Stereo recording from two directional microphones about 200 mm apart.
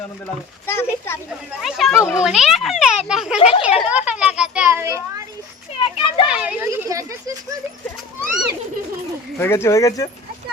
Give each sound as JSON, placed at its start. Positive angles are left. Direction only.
{"t": 0.7, "sound": "speech", "side_deg": 10}
{"t": 1.6, "sound": "a child's voice", "side_deg": 0}
{"t": 3.3, "sound": "speech", "side_deg": 30}
{"t": 3.8, "sound": "children playing", "side_deg": -5}
{"t": 5.7, "sound": "children playing", "side_deg": 25}
{"t": 6.2, "sound": "children playing", "side_deg": -5}
{"t": 6.7, "sound": "a sound", "side_deg": -15}
{"t": 9.4, "sound": "speech", "side_deg": 10}